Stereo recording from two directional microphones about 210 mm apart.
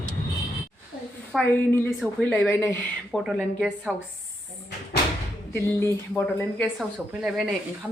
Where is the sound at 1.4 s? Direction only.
10° left (ahead or behind).